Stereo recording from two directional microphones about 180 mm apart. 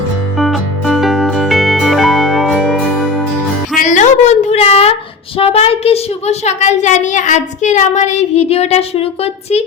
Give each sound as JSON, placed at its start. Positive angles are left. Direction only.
{"t": 0.3, "sound": "music", "side_deg": 0}
{"t": 3.8, "sound": "a sound", "side_deg": 40}
{"t": 5.4, "sound": "a woman's voice", "side_deg": 35}